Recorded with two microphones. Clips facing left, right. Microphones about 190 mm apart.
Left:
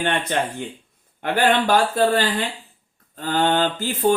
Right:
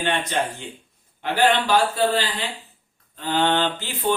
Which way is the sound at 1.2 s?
50° left (ahead or behind).